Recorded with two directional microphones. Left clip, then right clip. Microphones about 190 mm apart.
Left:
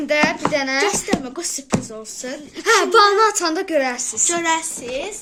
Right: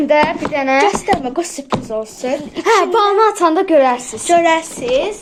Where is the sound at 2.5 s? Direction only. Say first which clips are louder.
Right 1 dB; 25° left (ahead or behind).